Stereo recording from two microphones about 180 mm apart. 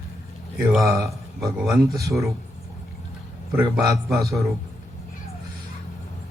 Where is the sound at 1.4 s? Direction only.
20° right (ahead or behind).